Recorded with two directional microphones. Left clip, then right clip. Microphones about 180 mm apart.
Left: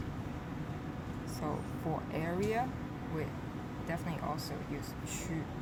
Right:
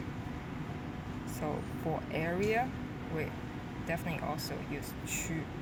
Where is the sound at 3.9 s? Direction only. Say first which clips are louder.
Right 2 dB; 5° right (ahead or behind).